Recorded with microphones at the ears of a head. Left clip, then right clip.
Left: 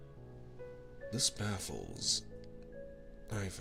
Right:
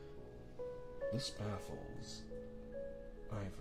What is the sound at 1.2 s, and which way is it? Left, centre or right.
Speech, left.